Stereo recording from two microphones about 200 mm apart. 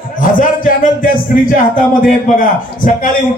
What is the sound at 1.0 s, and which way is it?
A man's voice, 40° left (ahead or behind).